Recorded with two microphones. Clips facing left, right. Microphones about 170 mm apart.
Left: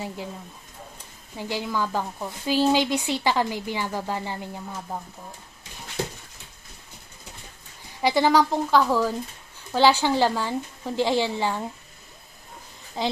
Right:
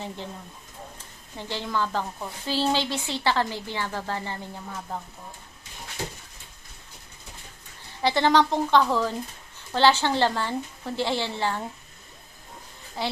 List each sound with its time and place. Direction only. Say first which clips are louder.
1.4 s a woman's voice: left 1 dB; 10° left (ahead or behind)
8.0 s a woman's voice: left 1 dB; 10° left (ahead or behind)
13.0 s a woman's voice: left 3 dB; 15° left (ahead or behind)